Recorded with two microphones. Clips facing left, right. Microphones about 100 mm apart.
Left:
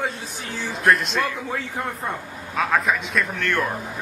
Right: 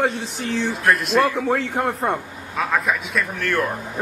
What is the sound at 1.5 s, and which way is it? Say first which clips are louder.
Speech: right 7 dB; 55° right (ahead or behind).